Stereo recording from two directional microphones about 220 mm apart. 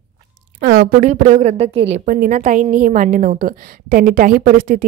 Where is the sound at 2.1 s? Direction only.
40° right (ahead or behind).